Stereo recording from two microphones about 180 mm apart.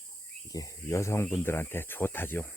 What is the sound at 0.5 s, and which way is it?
Speech, 15° left (ahead or behind).